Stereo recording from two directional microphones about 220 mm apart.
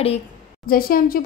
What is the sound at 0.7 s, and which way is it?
Speech, 40° left (ahead or behind).